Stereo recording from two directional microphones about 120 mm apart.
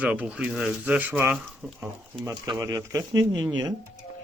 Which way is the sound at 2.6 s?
30° right (ahead or behind).